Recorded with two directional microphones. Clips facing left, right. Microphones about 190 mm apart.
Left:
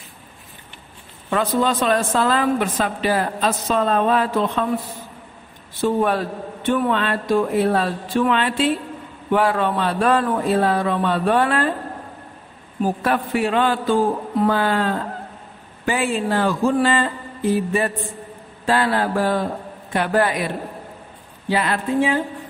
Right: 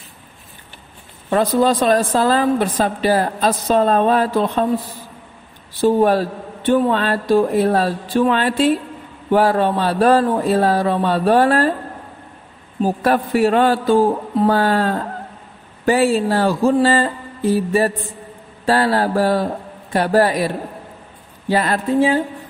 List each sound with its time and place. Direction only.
1.3 s a woman's voice: 35° right (ahead or behind)
5.8 s a woman's voice: 35° right (ahead or behind)
13.0 s a woman's voice: 40° right (ahead or behind)